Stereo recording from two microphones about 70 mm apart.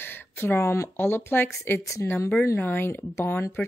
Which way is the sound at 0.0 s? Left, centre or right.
Left.